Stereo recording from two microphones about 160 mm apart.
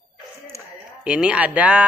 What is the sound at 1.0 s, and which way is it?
Speech, 5° right (ahead or behind).